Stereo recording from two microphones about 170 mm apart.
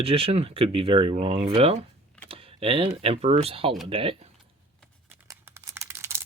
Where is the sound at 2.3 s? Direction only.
35° right (ahead or behind).